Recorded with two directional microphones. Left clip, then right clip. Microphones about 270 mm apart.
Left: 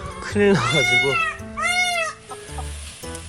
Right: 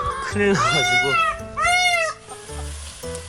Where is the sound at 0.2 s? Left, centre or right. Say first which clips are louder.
Left 3 dB; centre.